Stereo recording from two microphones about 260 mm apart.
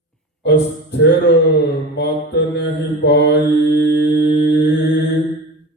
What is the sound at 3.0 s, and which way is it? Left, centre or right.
Mantra, left.